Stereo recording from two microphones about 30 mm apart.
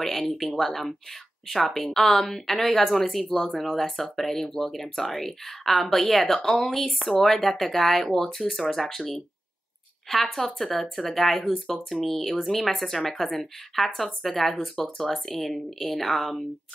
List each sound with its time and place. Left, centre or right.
0.0 s speech: centre
10.0 s speech: centre